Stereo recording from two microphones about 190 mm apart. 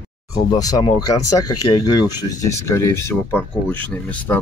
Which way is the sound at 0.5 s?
20° left (ahead or behind).